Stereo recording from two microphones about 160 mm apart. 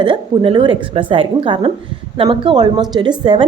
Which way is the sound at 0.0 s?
30° right (ahead or behind).